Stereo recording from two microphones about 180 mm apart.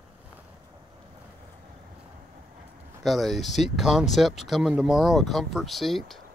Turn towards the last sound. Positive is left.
turn(degrees=0)  # may be behind; listen again after turning